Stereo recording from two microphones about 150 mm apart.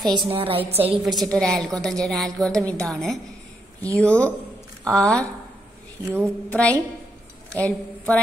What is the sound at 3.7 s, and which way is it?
Speech, 20° right (ahead or behind).